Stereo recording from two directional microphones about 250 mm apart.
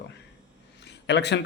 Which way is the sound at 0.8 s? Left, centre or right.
Left.